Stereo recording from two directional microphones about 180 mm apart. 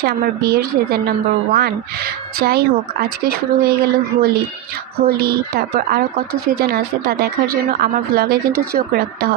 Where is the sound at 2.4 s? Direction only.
60° right (ahead or behind).